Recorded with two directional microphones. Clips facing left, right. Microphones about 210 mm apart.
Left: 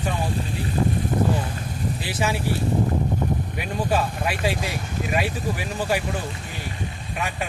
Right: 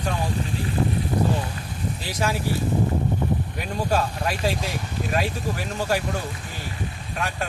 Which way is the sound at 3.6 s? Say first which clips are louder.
Left 1 dB; 10° left (ahead or behind).